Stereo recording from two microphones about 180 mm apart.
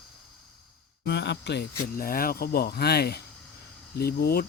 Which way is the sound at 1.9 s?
55° left (ahead or behind).